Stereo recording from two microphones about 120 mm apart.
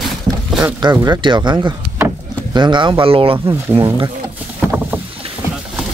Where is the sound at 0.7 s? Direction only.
35° right (ahead or behind).